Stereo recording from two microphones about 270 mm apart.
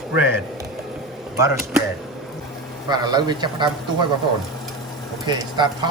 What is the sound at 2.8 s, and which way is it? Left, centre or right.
Speech, centre.